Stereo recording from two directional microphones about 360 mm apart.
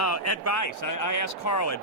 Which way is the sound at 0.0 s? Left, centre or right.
Left.